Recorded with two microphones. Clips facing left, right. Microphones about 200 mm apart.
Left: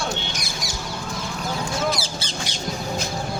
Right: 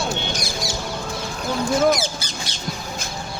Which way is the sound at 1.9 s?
30° left (ahead or behind).